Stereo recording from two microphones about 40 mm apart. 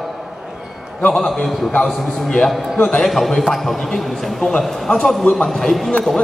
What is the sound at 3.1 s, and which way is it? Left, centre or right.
Speech, centre.